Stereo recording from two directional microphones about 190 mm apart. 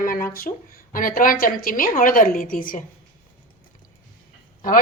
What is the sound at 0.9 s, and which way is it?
A woman's voice, 45° left (ahead or behind).